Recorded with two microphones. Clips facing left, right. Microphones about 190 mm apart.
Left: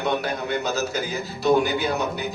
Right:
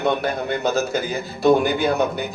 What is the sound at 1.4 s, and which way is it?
Speech, 50° right (ahead or behind).